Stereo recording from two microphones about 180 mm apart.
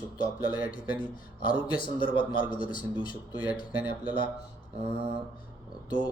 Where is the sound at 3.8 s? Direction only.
10° right (ahead or behind).